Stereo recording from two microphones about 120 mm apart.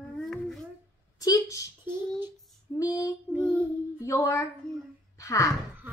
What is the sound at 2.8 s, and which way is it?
Speech, 25° left (ahead or behind).